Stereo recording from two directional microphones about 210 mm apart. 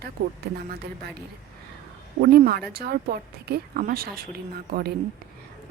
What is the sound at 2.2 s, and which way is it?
A woman's voice, 45° right (ahead or behind).